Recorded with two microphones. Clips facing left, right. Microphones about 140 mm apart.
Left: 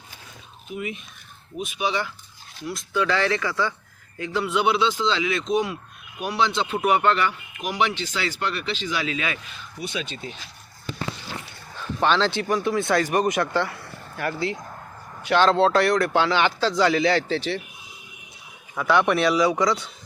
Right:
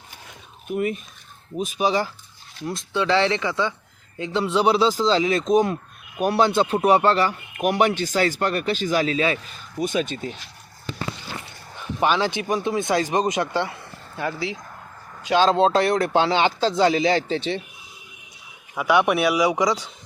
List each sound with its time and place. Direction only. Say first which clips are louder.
0.7 s speech: right 7 dB; 45° right (ahead or behind)
7.5 s speech: right 5 dB; 50° right (ahead or behind)
11.8 s speech: even; 10° right (ahead or behind)
18.7 s speech: right 1 dB; 10° right (ahead or behind)